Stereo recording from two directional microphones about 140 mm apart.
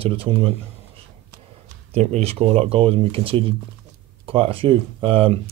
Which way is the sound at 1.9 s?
50° right (ahead or behind).